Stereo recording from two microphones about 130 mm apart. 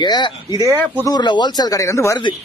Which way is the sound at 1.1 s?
35° left (ahead or behind).